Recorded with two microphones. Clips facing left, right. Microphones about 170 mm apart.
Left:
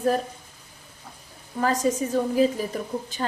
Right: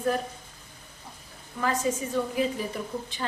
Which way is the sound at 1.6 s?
40° left (ahead or behind).